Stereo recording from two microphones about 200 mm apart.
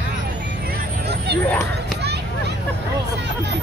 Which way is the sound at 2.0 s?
55° right (ahead or behind).